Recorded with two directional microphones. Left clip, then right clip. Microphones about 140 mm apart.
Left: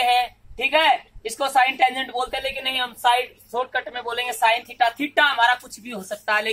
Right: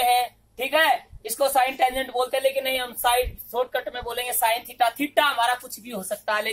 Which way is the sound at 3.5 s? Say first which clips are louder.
Left 3 dB; 45° right (ahead or behind).